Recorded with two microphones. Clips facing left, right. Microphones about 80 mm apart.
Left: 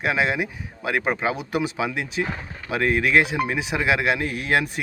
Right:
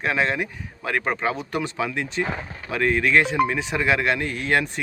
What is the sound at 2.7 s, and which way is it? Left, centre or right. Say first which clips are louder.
Speech: even; centre.